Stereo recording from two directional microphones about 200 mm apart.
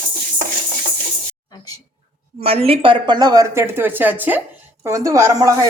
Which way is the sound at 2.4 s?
30° right (ahead or behind).